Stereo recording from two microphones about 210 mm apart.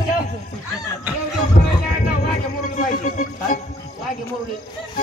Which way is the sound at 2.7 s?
40° left (ahead or behind).